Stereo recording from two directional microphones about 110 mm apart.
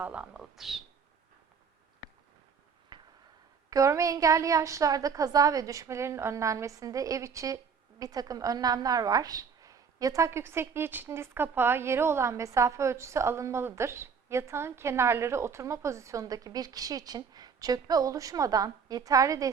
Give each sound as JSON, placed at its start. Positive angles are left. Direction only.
{"t": 0.0, "sound": "speech", "side_deg": -10}
{"t": 2.9, "sound": "a sound", "side_deg": -40}
{"t": 3.7, "sound": "a woman's voice", "side_deg": -30}